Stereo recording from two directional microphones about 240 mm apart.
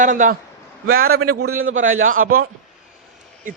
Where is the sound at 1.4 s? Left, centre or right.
Right.